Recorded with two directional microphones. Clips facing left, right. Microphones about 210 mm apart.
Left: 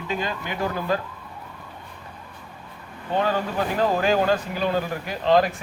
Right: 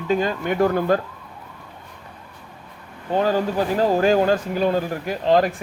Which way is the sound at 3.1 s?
40° right (ahead or behind).